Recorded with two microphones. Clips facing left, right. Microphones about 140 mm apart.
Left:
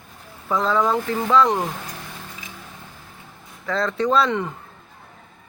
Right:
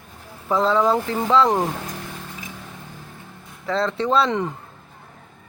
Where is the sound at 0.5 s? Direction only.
30° right (ahead or behind).